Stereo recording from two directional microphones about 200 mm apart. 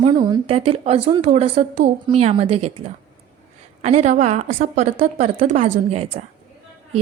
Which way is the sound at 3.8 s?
35° right (ahead or behind).